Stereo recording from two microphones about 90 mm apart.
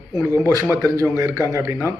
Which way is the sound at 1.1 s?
30° right (ahead or behind).